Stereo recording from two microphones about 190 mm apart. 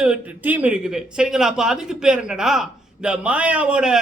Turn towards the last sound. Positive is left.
turn(degrees=-5)  # may be behind; listen again after turning